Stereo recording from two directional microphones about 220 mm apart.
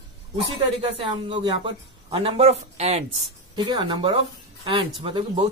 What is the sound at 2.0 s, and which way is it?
A man's voice, 25° right (ahead or behind).